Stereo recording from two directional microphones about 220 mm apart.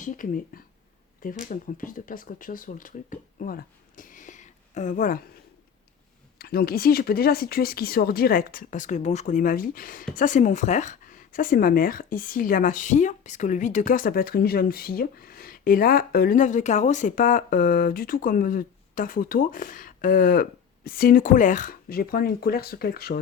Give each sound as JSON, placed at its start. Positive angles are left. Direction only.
{"t": 0.0, "sound": "speech", "side_deg": 35}
{"t": 6.4, "sound": "speech", "side_deg": 45}